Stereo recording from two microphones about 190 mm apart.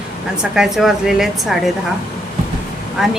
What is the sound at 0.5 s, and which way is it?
Speech, 5° right (ahead or behind).